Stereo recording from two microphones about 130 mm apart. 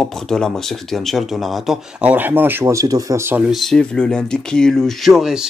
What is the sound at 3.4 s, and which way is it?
Speech, centre (ahead or behind).